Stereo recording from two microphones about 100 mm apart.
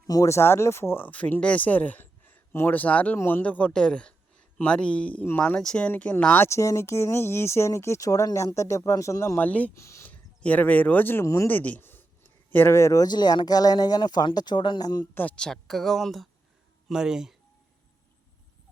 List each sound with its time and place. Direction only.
0.1 s speech: 30° left (ahead or behind)
5.5 s speech: 10° left (ahead or behind); by 9.4 s 30° left (ahead or behind)
9.4 s speech: 15° left (ahead or behind)
9.7 s speech: 30° left (ahead or behind)
10.1 s speech: 15° left (ahead or behind)
11.4 s speech: 15° left (ahead or behind); by 15.0 s 40° left (ahead or behind)
15.1 s speech: 15° left (ahead or behind); by 17.3 s 5° right (ahead or behind)